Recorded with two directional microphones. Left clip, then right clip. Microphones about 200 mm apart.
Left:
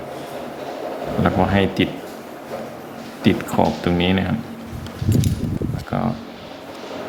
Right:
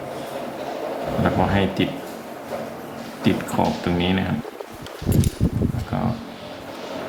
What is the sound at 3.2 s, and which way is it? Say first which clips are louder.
Speech: left 3 dB; 40° left (ahead or behind).